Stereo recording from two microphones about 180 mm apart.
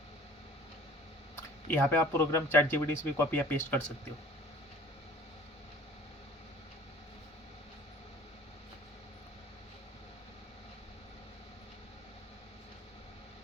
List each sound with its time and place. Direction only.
1.7 s speech: 10° left (ahead or behind)